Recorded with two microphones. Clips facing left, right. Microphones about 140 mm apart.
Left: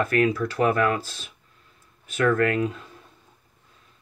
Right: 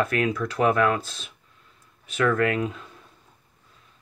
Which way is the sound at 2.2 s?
40° left (ahead or behind).